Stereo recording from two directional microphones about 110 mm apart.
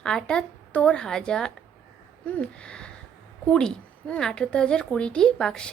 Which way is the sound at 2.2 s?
10° left (ahead or behind).